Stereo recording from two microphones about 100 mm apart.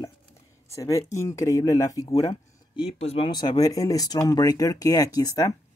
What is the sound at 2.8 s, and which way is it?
Speech, 85° left.